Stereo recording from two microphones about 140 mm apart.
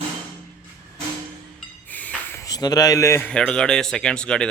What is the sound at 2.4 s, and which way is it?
Speech, 25° left (ahead or behind).